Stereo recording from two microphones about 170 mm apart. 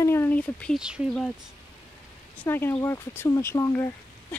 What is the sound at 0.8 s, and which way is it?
Speech, 5° right (ahead or behind).